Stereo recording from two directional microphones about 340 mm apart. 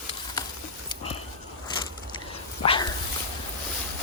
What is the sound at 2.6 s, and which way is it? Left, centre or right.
Dog, centre.